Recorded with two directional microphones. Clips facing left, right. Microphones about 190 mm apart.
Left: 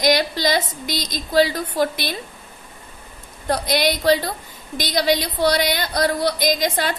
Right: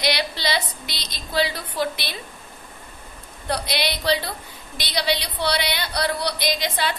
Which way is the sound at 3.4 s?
45° left (ahead or behind).